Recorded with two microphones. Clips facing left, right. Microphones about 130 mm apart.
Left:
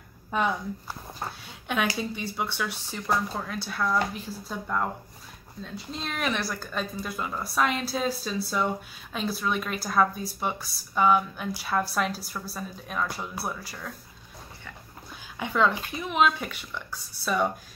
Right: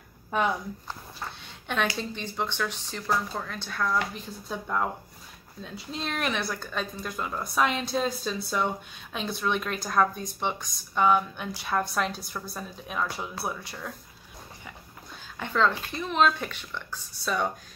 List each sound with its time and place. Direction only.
1.4 s a woman's voice: 5° left (ahead or behind)
15.3 s speech: 10° left (ahead or behind)